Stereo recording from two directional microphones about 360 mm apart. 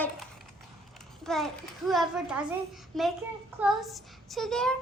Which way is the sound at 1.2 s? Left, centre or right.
Centre.